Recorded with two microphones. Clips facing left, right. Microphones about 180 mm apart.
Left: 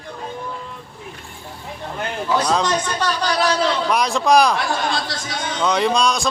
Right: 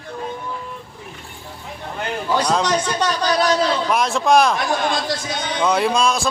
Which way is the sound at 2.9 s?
20° right (ahead or behind).